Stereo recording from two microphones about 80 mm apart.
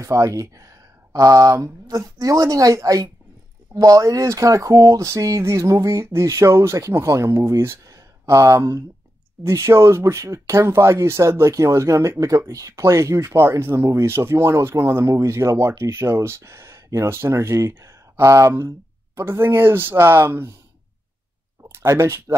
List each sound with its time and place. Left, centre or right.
0.0 s speech: right
7.8 s a sound: right
9.4 s speech: right
21.7 s speech: right